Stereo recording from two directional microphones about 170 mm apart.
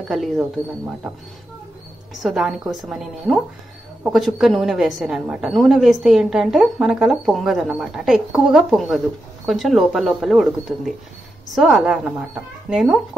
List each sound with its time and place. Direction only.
0.1 s a woman's voice: centre (ahead or behind)
2.2 s a woman's voice: centre (ahead or behind)
11.5 s a woman's voice: 5° right (ahead or behind)